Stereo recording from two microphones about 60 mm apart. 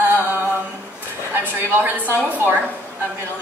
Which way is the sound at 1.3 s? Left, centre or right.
Right.